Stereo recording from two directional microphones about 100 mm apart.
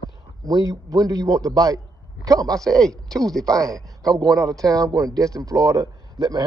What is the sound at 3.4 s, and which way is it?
A man's voice, 35° right (ahead or behind).